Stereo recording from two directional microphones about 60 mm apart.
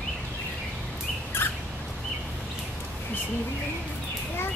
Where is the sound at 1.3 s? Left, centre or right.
Left.